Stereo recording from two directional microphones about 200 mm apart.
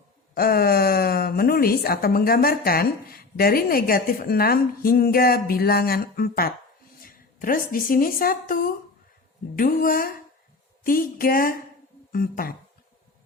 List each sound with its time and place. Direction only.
0.3 s a woman's voice: 50° left (ahead or behind)